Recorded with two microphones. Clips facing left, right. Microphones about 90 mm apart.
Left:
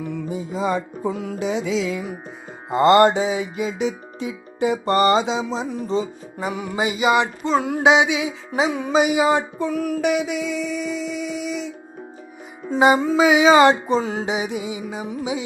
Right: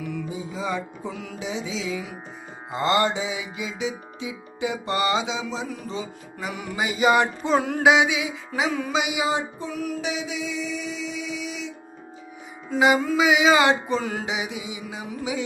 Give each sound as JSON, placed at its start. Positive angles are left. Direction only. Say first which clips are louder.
{"t": 0.3, "sound": "music", "louder": "left 9 dB", "side_deg": 50}
{"t": 7.2, "sound": "music", "louder": "left 1 dB", "side_deg": -5}
{"t": 7.8, "sound": "music", "louder": "left 3 dB", "side_deg": 25}
{"t": 8.9, "sound": "child singing", "louder": "left 7 dB", "side_deg": 45}
{"t": 12.7, "sound": "music", "louder": "left 4 dB", "side_deg": 30}
{"t": 14.3, "sound": "music", "louder": "left 5 dB", "side_deg": 40}